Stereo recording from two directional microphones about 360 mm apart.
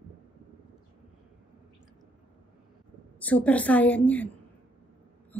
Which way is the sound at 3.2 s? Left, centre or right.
Centre.